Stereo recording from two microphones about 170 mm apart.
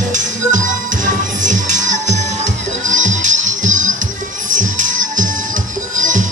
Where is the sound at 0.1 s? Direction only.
50° right (ahead or behind).